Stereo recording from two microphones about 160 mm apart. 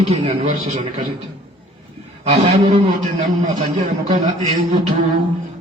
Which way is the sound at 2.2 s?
40° right (ahead or behind).